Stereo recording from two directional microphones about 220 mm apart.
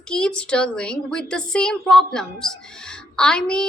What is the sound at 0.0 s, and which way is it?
A woman's voice, 5° left (ahead or behind).